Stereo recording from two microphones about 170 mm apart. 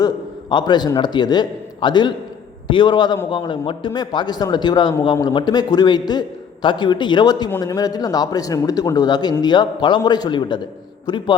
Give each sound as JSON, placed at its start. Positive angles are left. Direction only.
{"t": 0.5, "sound": "a man's voice", "side_deg": 25}